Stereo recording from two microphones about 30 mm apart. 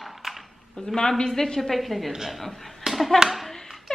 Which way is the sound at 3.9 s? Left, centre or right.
Centre.